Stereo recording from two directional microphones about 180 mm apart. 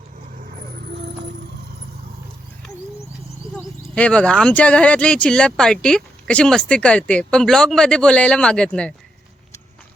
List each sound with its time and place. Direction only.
0.9 s music: 70° right (ahead or behind)
3.5 s speech: 5° left (ahead or behind)